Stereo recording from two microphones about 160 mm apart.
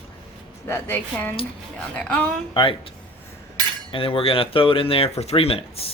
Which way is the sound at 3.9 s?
35° left (ahead or behind).